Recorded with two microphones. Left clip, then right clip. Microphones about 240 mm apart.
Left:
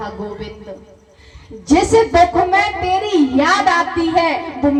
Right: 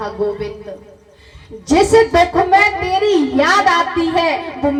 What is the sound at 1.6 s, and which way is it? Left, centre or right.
A child's voice, right.